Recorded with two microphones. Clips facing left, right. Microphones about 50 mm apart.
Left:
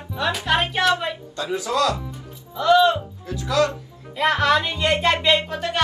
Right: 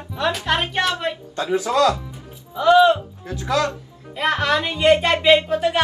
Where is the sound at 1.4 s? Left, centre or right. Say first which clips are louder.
Right 4 dB; right.